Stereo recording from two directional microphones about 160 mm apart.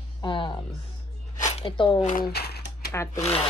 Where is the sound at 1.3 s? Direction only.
50° left (ahead or behind).